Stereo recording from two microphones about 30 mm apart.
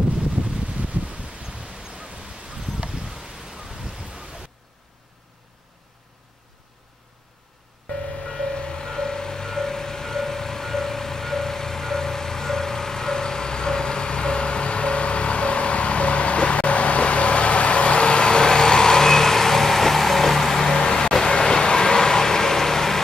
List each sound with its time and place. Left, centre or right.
0.6 s a sound: right
2.6 s rustling leaves: centre
8.2 s vehicle: left; by 20.7 s centre
20.7 s vehicle: left